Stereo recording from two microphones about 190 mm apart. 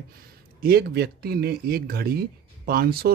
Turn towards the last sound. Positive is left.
turn(degrees=-55)  # may be behind; listen again after turning